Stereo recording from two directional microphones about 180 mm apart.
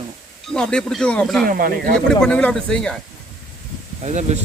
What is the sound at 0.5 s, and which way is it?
Speech, 5° left (ahead or behind).